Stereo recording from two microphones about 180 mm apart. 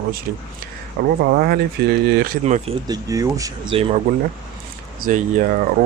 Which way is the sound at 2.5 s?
40° right (ahead or behind).